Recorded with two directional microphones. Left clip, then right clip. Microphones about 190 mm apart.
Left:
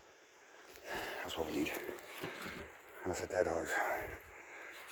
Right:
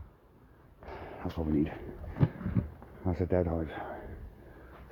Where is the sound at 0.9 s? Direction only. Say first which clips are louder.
Even; centre (ahead or behind).